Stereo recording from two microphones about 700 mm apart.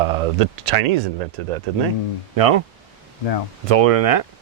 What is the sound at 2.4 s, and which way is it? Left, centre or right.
Speech, right.